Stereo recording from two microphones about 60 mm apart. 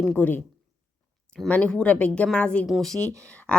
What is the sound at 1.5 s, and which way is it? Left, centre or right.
Speech, centre.